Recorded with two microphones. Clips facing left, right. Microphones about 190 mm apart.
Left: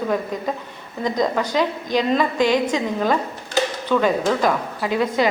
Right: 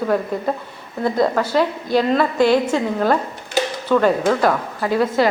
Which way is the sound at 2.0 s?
15° left (ahead or behind).